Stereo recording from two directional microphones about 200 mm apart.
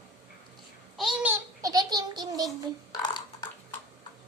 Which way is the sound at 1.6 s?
20° right (ahead or behind).